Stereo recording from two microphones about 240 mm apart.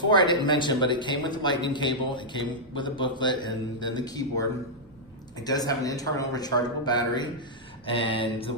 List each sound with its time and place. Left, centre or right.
0.1 s a man's voice: centre